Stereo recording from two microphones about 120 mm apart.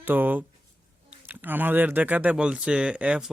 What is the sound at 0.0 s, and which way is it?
Speech, 15° right (ahead or behind).